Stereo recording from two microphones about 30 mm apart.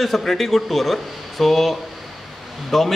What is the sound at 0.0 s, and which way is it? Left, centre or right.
A man's voice, centre.